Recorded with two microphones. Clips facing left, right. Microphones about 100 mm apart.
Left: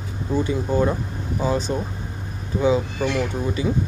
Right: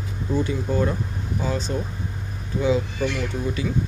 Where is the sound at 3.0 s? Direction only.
35° left (ahead or behind).